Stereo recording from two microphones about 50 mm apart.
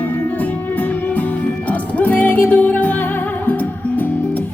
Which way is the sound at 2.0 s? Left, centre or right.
Left.